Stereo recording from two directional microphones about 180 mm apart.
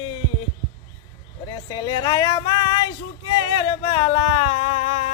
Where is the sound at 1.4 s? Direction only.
25° left (ahead or behind).